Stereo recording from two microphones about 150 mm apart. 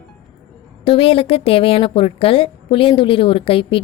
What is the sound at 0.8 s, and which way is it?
A woman's voice, 35° left (ahead or behind).